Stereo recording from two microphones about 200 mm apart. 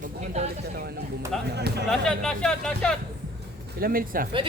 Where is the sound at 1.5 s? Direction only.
55° right (ahead or behind).